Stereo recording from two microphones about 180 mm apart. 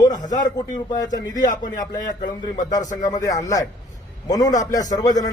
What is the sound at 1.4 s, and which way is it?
Speech, 45° left (ahead or behind).